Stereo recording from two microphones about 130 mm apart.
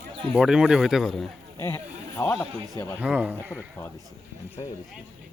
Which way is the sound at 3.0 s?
10° right (ahead or behind).